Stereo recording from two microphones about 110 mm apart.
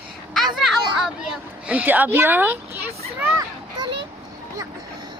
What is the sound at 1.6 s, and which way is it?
Speech, 15° right (ahead or behind).